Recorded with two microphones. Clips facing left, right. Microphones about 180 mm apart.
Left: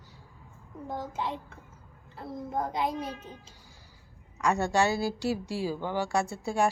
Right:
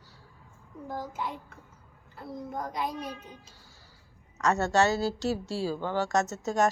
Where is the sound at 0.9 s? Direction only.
25° left (ahead or behind).